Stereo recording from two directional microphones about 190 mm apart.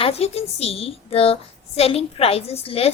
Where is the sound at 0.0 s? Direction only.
30° left (ahead or behind).